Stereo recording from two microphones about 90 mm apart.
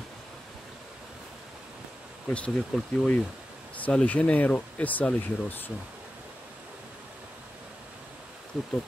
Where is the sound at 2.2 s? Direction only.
15° left (ahead or behind).